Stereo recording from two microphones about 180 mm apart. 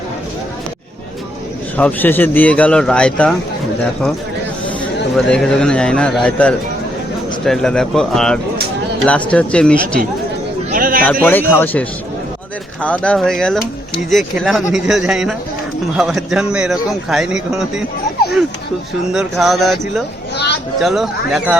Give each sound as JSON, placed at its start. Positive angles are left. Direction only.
{"t": 1.7, "sound": "a man's voice", "side_deg": 10}
{"t": 5.1, "sound": "a man's voice", "side_deg": 5}
{"t": 10.7, "sound": "speech", "side_deg": -50}
{"t": 11.0, "sound": "a man's voice", "side_deg": 10}
{"t": 19.1, "sound": "a man's voice", "side_deg": 0}
{"t": 20.3, "sound": "a sound", "side_deg": 70}
{"t": 20.7, "sound": "a man's voice", "side_deg": 0}